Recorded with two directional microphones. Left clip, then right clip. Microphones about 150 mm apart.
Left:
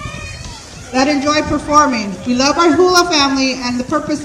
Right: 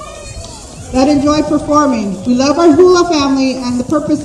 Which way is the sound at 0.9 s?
50° left (ahead or behind).